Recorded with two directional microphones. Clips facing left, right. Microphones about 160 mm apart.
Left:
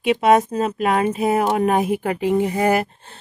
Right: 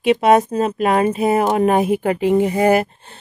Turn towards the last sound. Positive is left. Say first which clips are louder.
# right 4 dB
turn(degrees=-20)  # may be behind; listen again after turning